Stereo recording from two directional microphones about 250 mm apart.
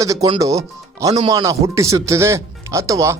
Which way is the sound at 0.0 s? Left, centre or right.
Centre.